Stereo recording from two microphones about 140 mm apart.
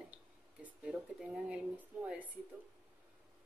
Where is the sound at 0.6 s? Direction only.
5° right (ahead or behind).